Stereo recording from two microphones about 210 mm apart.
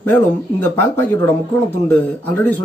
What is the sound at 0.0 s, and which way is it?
A man's voice, 10° left (ahead or behind).